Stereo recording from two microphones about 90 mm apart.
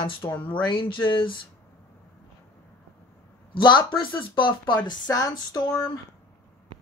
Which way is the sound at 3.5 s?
65° left (ahead or behind).